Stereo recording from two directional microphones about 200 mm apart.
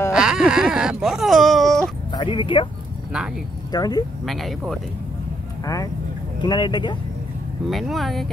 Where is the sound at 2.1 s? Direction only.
25° left (ahead or behind).